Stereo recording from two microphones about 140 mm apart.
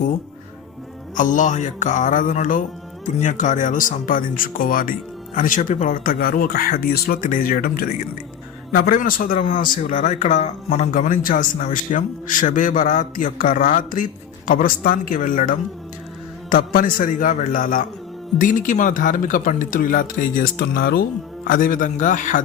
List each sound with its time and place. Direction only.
1.1 s music: 65° left (ahead or behind)
3.2 s a man's voice: 60° left (ahead or behind)